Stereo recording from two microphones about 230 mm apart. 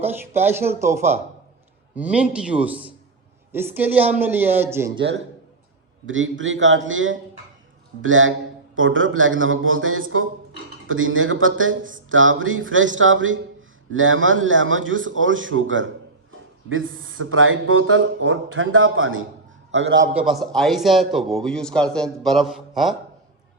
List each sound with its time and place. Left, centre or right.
0.3 s a man's voice: centre
4.9 s a man's voice: right
20.1 s speech: centre